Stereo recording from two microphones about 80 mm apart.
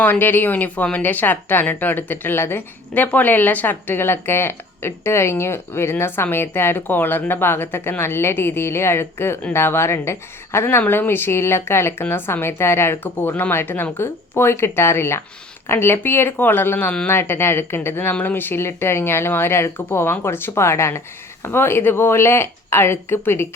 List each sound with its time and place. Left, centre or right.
0.0 s speech: left